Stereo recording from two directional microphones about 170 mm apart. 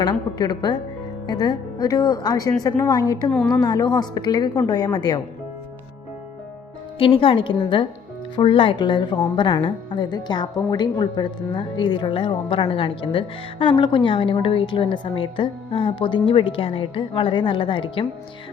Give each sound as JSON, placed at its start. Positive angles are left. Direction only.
{"t": 0.0, "sound": "a woman's voice", "side_deg": 25}
{"t": 3.2, "sound": "a woman's voice", "side_deg": 5}
{"t": 3.5, "sound": "a woman's voice", "side_deg": 25}
{"t": 7.0, "sound": "a woman's voice", "side_deg": 30}